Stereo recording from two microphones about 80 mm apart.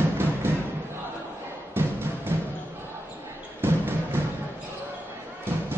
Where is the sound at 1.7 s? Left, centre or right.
Right.